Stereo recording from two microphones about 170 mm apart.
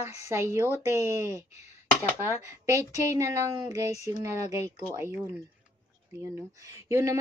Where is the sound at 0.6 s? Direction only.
15° left (ahead or behind).